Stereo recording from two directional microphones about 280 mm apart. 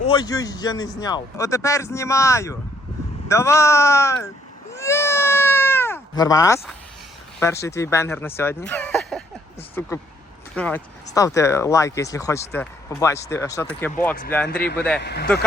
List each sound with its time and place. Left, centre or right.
0.1 s a man's voice: centre
4.7 s cat: centre
7.3 s a man's voice: centre
8.4 s a sound: centre
9.8 s a man's voice: centre
15.0 s speech: left